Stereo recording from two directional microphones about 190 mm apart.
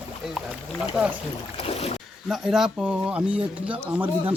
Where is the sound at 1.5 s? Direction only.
30° left (ahead or behind).